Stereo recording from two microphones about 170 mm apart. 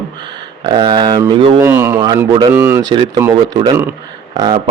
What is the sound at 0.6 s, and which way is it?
Speech, 30° right (ahead or behind).